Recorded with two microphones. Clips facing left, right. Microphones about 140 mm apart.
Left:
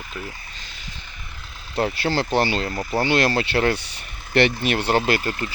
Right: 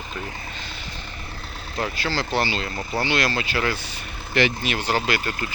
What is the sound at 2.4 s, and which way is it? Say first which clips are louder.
Speech: left 3 dB; 50° left (ahead or behind).